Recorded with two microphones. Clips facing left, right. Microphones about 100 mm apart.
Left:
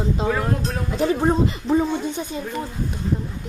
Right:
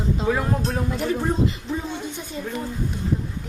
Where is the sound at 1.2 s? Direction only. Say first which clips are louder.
Left 4 dB; 45° left (ahead or behind).